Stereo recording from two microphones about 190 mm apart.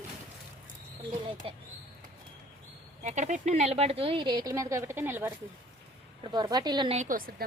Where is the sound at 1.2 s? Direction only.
30° right (ahead or behind).